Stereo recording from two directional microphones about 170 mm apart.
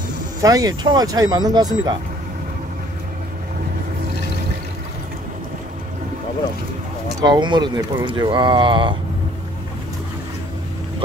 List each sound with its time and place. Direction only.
0.4 s speech: 20° right (ahead or behind)
7.2 s speech: 25° right (ahead or behind)